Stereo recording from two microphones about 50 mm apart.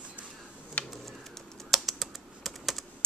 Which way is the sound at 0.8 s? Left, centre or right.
Left.